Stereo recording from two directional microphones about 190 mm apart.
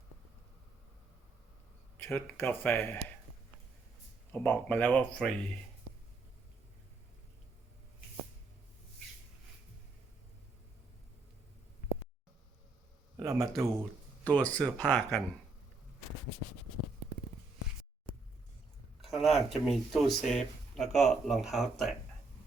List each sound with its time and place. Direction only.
2.0 s speech: 10° left (ahead or behind)
4.3 s speech: 10° left (ahead or behind)
13.1 s a sound: 15° right (ahead or behind)
14.3 s speech: 5° left (ahead or behind)
19.0 s speech: centre (ahead or behind)